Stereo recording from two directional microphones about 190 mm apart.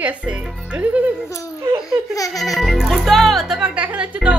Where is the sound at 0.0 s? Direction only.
5° right (ahead or behind).